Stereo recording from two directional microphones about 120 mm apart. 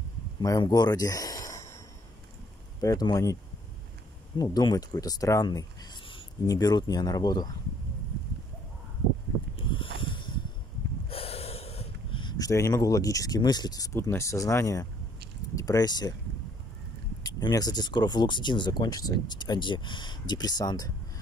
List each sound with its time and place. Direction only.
0.4 s speech: 30° left (ahead or behind)
2.8 s speech: 30° left (ahead or behind)
4.4 s speech: 35° left (ahead or behind)
9.6 s a sound: 45° left (ahead or behind)
11.1 s snort: 55° left (ahead or behind)
12.2 s speech: 35° left (ahead or behind)
13.9 s speech: 25° left (ahead or behind)
17.2 s speech: 35° left (ahead or behind)